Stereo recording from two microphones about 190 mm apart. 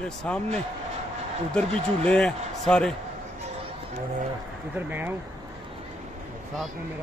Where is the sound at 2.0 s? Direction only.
5° left (ahead or behind).